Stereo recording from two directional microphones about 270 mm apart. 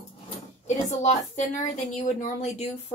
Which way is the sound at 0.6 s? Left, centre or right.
Left.